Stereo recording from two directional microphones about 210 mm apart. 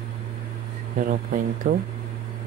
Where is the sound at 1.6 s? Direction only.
35° right (ahead or behind).